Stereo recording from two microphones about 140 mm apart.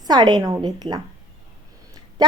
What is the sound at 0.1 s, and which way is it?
Speech, 30° right (ahead or behind).